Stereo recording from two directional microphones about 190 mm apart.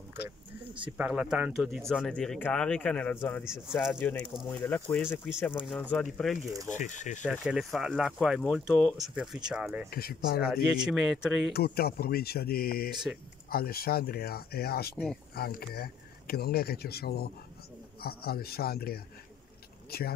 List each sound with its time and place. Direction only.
0.9 s speech: 5° right (ahead or behind)
3.7 s speech: centre (ahead or behind)
4.0 s speech: 10° left (ahead or behind)
6.7 s speech: 40° left (ahead or behind)
7.2 s speech: 5° right (ahead or behind)
9.8 s speech: 55° left (ahead or behind)
10.5 s speech: 5° right (ahead or behind)
11.5 s speech: 55° left (ahead or behind)